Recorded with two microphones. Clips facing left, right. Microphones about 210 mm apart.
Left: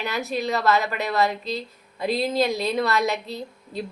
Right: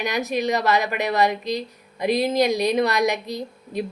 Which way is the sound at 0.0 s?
15° right (ahead or behind).